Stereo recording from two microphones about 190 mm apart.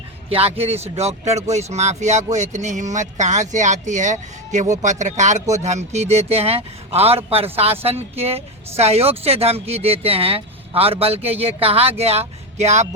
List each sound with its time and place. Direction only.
0.3 s a woman's voice: 30° right (ahead or behind)